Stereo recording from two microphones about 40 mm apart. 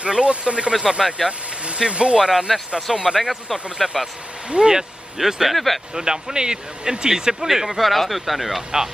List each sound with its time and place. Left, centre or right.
0.0 s speech: right
0.7 s speech: centre
1.7 s speech: right
2.1 s speech: centre
5.1 s speech: centre
5.9 s speech: centre
7.4 s speech: centre